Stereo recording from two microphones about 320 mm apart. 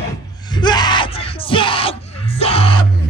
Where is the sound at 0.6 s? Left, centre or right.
Centre.